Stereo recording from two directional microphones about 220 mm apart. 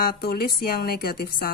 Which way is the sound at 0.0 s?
45° left (ahead or behind).